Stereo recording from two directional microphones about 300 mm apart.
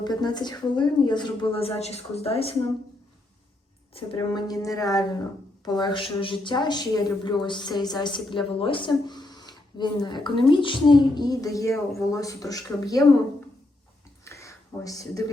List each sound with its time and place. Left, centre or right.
0.0 s speech: centre
3.9 s speech: centre
14.3 s a sound: centre